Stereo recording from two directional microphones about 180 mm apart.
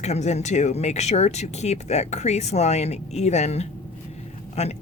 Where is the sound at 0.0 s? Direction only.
40° left (ahead or behind).